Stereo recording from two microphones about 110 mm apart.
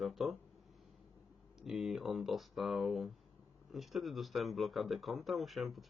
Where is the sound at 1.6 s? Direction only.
Centre (ahead or behind).